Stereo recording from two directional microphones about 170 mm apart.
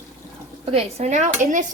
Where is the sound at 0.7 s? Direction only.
40° right (ahead or behind).